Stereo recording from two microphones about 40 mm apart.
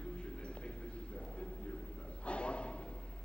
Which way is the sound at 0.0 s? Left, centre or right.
Left.